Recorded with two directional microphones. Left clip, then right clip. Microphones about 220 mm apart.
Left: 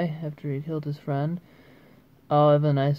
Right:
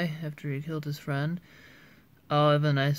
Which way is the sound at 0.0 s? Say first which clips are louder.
Left 4 dB; 15° right (ahead or behind).